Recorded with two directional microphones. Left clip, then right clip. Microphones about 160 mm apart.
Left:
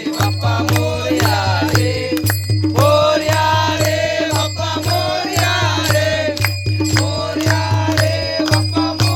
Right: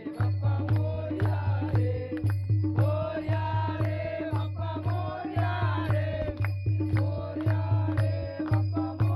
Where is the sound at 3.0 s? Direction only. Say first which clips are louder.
Left 19 dB; 60° left (ahead or behind).